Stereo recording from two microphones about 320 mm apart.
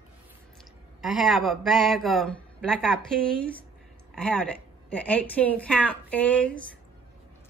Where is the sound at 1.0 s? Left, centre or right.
Centre.